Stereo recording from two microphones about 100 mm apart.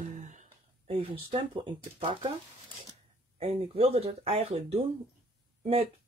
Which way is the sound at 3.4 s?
70° right (ahead or behind).